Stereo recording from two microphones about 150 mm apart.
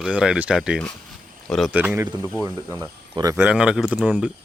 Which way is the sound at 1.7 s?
10° right (ahead or behind).